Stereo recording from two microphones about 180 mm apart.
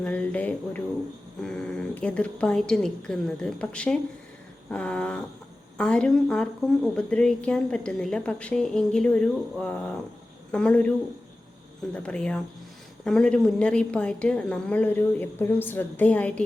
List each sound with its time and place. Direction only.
0.0 s a woman's voice: 5° left (ahead or behind)
11.9 s a woman's voice: 5° left (ahead or behind)